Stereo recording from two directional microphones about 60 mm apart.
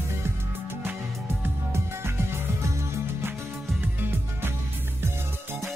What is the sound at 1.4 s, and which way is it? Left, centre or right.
Music, right.